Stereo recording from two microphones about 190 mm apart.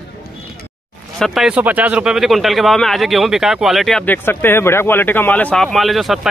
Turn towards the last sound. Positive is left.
turn(degrees=0)  # may be behind; listen again after turning